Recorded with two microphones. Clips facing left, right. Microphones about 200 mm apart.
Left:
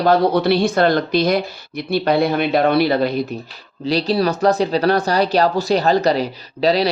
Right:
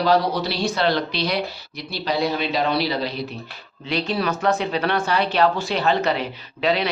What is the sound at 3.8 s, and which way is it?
Speech, 35° left (ahead or behind).